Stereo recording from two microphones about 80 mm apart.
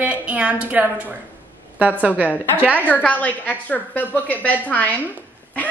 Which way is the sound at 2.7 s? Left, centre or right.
Left.